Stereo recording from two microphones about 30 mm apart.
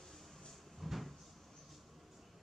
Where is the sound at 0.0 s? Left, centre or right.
Centre.